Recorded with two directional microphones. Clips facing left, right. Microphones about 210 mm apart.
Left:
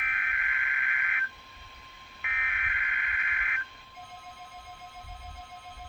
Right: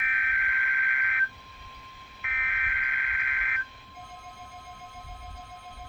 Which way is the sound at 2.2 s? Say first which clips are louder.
Right 1 dB; centre (ahead or behind).